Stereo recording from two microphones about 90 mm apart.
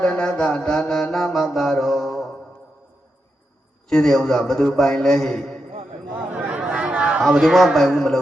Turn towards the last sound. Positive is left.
turn(degrees=0)  # may be behind; listen again after turning